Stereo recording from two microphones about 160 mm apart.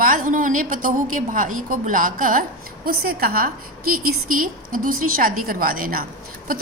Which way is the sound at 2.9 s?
70° right (ahead or behind).